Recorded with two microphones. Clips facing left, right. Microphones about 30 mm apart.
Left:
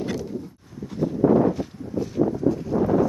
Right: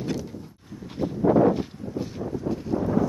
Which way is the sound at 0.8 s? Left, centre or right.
Right.